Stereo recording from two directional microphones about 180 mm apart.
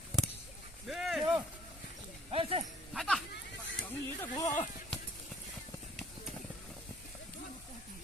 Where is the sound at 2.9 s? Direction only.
Centre (ahead or behind).